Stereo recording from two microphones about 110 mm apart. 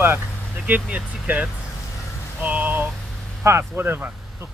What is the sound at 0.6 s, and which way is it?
Speech, 15° right (ahead or behind).